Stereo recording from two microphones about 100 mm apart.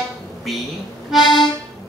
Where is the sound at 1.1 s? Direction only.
Centre (ahead or behind).